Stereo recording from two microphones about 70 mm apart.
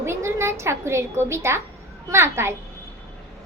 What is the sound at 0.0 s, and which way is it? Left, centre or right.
A woman's voice, right.